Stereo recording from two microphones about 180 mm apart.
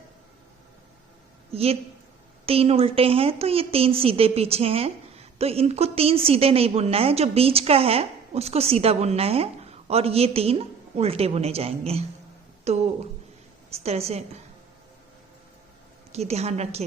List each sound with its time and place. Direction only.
1.5 s a woman's voice: 35° right (ahead or behind)
16.1 s a woman's voice: 35° right (ahead or behind)